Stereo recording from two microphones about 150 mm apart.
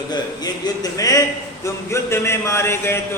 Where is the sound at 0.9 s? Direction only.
25° left (ahead or behind).